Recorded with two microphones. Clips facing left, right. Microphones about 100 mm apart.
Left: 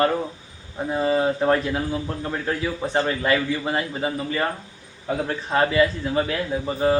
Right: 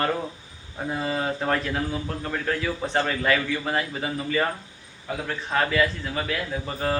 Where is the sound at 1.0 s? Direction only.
20° left (ahead or behind).